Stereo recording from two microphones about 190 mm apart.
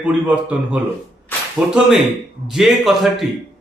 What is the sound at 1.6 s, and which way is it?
A man's voice, 5° right (ahead or behind).